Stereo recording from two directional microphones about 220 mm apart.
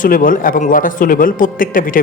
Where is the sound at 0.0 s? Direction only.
40° left (ahead or behind).